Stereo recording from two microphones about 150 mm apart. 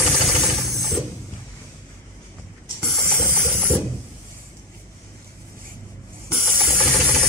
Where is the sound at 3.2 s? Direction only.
15° right (ahead or behind).